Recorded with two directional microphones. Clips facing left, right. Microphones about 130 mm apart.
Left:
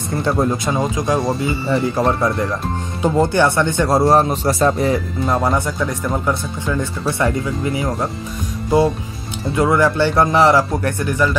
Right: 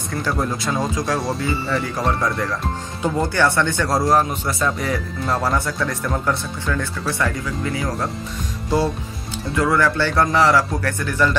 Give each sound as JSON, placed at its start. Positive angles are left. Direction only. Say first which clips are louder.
{"t": 0.1, "sound": "speech", "louder": "left 5 dB", "side_deg": 25}
{"t": 9.6, "sound": "speech", "louder": "left 3 dB", "side_deg": 20}